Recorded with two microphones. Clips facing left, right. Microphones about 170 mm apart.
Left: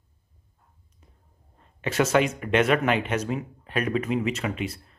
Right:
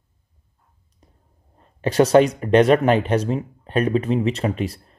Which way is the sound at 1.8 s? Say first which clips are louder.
Right 8 dB; 35° right (ahead or behind).